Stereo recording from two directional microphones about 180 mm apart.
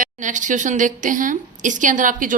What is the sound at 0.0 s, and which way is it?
A woman's voice, 45° right (ahead or behind).